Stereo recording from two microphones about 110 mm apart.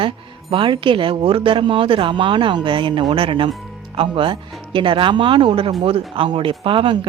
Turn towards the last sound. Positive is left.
turn(degrees=-50)  # may be behind; listen again after turning